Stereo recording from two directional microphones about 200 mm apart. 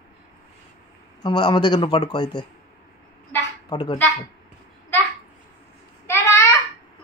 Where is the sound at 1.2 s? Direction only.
20° left (ahead or behind).